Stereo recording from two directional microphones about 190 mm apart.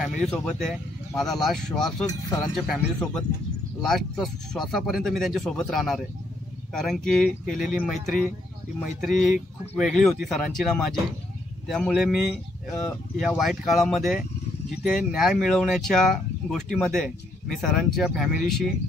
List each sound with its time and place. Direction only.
0.0 s speech: centre (ahead or behind)
2.0 s speech: 20° left (ahead or behind)
2.5 s speech: centre (ahead or behind)